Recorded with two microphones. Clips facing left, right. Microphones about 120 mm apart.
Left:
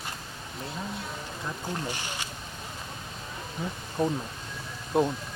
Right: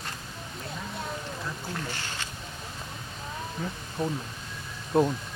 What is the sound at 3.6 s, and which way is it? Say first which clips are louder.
Speech: left 1 dB; 10° left (ahead or behind).